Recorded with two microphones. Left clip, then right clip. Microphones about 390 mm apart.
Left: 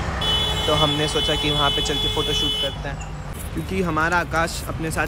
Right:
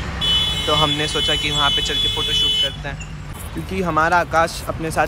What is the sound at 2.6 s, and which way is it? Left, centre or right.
Speech, centre.